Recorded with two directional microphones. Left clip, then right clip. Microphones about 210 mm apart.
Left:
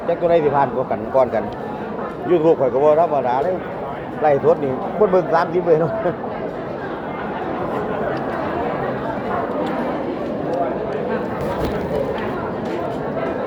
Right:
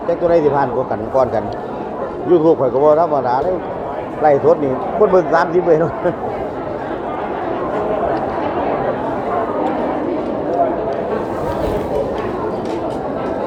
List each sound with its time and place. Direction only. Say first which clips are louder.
0.3 s speech: right 2 dB; 15° right (ahead or behind)